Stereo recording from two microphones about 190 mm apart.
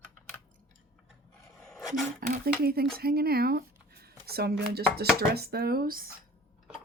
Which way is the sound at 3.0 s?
55° right (ahead or behind).